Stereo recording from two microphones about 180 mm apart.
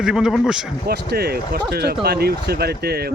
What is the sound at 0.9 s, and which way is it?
Speech, 60° right (ahead or behind).